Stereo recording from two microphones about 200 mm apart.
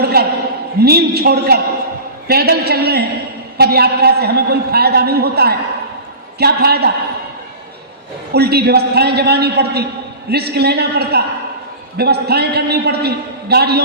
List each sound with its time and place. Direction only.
0.0 s a man's voice: 50° right (ahead or behind)
8.3 s a man's voice: 50° right (ahead or behind)